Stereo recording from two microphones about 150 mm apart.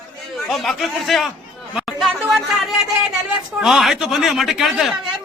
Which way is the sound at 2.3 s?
Centre (ahead or behind).